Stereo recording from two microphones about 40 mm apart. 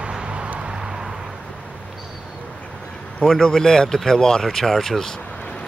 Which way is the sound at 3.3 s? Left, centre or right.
Centre.